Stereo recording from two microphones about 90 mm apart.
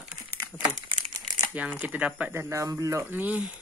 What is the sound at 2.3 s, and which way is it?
Speech, 30° right (ahead or behind).